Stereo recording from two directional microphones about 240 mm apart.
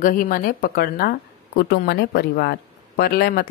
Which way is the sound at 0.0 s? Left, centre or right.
Left.